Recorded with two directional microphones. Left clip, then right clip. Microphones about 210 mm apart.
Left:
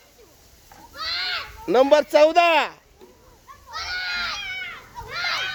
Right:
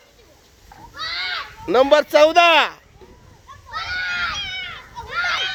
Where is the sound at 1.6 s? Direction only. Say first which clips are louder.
Right 2 dB; 10° left (ahead or behind).